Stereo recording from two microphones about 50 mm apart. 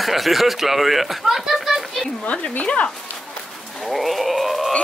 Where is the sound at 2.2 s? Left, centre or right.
Left.